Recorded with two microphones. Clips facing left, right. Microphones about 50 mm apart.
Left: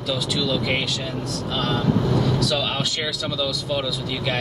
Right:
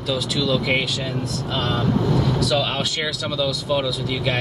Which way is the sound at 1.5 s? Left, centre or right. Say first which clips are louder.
Even; right.